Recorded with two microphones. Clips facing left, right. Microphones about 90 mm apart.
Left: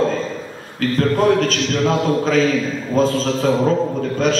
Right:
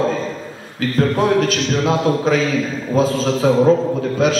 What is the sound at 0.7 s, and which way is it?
A man's voice, 5° right (ahead or behind).